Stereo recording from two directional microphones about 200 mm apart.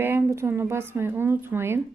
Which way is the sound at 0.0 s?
10° right (ahead or behind).